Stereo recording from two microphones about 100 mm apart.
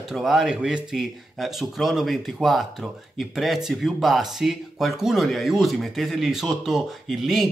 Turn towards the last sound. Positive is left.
turn(degrees=0)  # may be behind; listen again after turning